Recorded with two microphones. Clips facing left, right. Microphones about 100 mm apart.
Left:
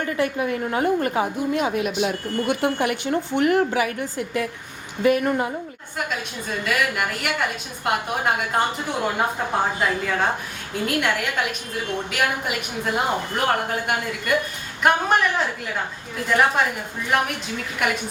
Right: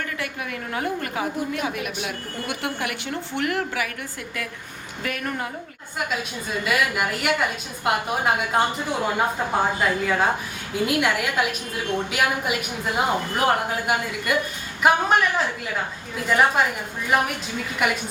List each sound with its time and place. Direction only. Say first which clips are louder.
0.0 s a woman's voice: left 7 dB; 30° left (ahead or behind)
6.7 s a woman's voice: even; 5° right (ahead or behind)
9.8 s a woman's voice: right 1 dB; 5° right (ahead or behind)